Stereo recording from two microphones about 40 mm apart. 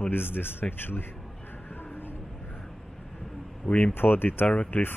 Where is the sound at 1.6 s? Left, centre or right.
Left.